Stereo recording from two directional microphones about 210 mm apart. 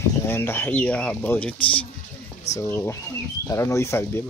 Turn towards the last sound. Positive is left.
turn(degrees=10)  # may be behind; listen again after turning